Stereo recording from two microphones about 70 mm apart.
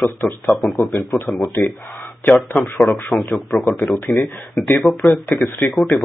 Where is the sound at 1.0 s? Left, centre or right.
Left.